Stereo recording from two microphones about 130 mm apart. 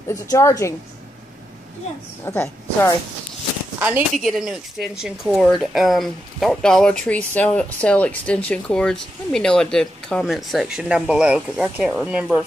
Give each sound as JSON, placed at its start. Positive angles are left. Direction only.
{"t": 0.1, "sound": "a woman's voice", "side_deg": 25}
{"t": 2.2, "sound": "a woman's voice", "side_deg": 20}
{"t": 4.3, "sound": "speech", "side_deg": -5}